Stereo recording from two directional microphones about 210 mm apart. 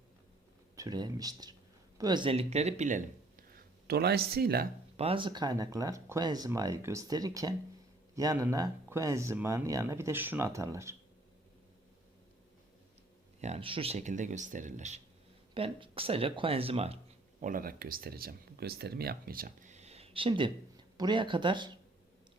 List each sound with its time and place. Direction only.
0.8 s speech: 20° right (ahead or behind); by 3.4 s 35° right (ahead or behind)
3.8 s speech: 50° right (ahead or behind)
4.9 s speech: 25° right (ahead or behind)
13.4 s speech: 30° right (ahead or behind)
17.4 s speech: 40° right (ahead or behind); by 21.8 s 20° right (ahead or behind)